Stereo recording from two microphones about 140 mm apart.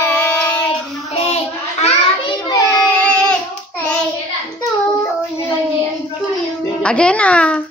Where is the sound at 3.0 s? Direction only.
10° left (ahead or behind).